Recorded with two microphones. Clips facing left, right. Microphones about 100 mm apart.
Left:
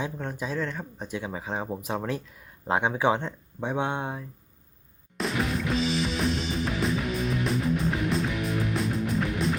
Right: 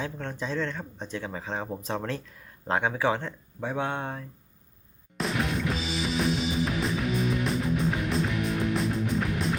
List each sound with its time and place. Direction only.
0.0 s speech: 10° left (ahead or behind)
5.1 s music: centre (ahead or behind)